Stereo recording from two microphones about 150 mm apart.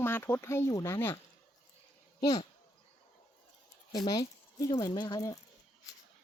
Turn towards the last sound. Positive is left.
turn(degrees=25)  # may be behind; listen again after turning